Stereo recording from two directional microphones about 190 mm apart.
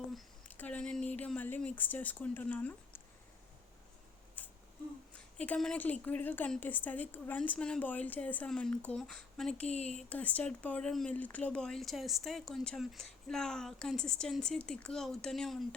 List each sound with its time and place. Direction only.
0.1 s a woman's voice: 5° left (ahead or behind)
4.4 s a sound: 5° left (ahead or behind)
5.1 s a woman's voice: 5° left (ahead or behind)
9.6 s speech: 35° left (ahead or behind)
10.1 s speech: 10° left (ahead or behind)